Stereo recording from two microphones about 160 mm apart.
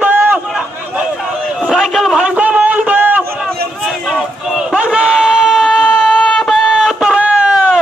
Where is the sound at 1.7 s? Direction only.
Centre (ahead or behind).